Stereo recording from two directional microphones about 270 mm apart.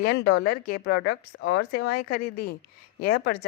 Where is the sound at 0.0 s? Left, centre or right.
Left.